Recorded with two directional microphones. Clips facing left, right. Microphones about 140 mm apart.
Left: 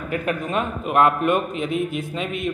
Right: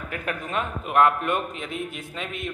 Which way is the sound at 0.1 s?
20° left (ahead or behind).